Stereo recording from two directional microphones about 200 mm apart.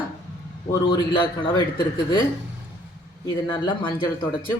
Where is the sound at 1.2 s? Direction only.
25° left (ahead or behind).